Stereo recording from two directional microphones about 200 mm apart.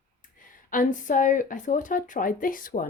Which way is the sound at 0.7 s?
40° left (ahead or behind).